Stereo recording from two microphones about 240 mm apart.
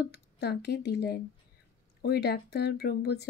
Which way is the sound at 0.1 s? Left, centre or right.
Left.